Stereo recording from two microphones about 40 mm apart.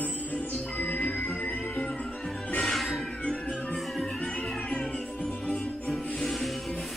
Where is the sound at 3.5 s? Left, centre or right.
Left.